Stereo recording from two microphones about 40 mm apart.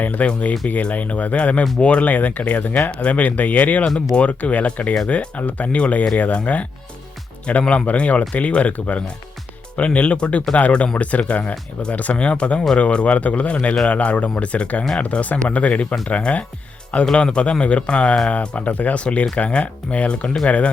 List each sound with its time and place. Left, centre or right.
0.0 s speech: left
2.0 s speech: left
3.8 s speech: left
4.2 s speech: left
15.2 s speech: left
17.1 s speech: left
19.0 s speech: left